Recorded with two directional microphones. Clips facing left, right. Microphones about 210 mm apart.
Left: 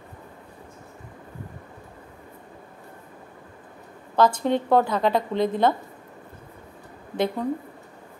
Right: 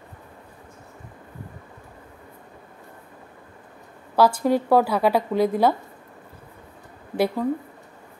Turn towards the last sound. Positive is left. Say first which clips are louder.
# right 2 dB
turn(degrees=-5)  # may be behind; listen again after turning